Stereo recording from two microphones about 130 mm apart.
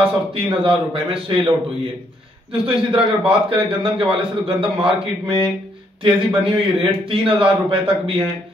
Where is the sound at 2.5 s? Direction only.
45° right (ahead or behind).